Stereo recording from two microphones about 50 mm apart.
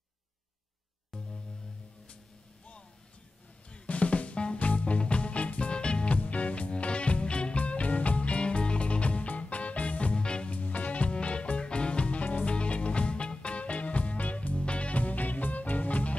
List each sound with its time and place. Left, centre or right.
1.1 s music: centre
3.7 s music: left
10.5 s music: left